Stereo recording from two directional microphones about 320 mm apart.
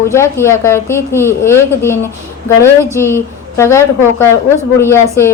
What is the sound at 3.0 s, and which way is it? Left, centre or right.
A man's voice, centre.